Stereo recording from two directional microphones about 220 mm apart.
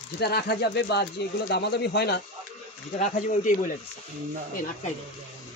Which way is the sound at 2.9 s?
35° left (ahead or behind).